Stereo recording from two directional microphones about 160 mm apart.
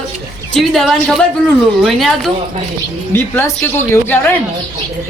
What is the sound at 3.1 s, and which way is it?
Speech, 15° left (ahead or behind).